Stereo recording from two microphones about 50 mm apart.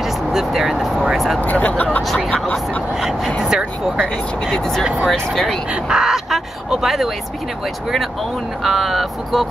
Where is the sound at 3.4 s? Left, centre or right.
Centre.